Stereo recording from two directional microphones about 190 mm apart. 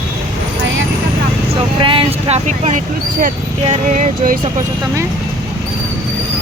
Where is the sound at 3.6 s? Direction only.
40° right (ahead or behind).